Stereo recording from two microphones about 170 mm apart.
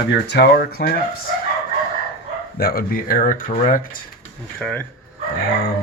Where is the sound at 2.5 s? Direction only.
60° left (ahead or behind).